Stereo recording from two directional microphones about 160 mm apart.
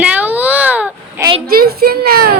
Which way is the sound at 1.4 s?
70° right (ahead or behind).